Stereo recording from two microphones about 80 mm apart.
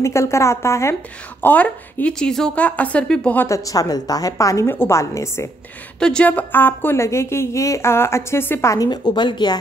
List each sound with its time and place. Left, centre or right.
0.0 s a woman's voice: left
1.4 s speech: left
3.4 s a woman's voice: left
4.6 s a woman's voice: left
5.9 s a woman's voice: centre; by 8.7 s left
8.7 s speech: left